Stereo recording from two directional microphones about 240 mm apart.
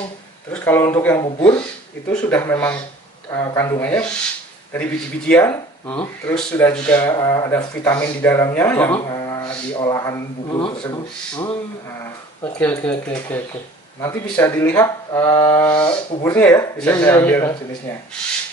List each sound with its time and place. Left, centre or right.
0.5 s speech: centre
7.0 s speech: centre
12.5 s speech: centre
16.3 s speech: centre